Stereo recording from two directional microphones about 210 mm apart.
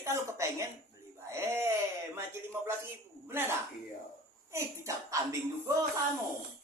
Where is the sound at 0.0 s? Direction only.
15° right (ahead or behind).